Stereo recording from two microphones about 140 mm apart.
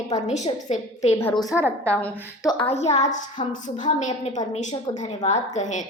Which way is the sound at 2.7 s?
50° left (ahead or behind).